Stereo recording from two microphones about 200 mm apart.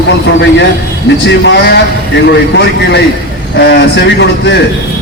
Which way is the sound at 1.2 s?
60° left (ahead or behind).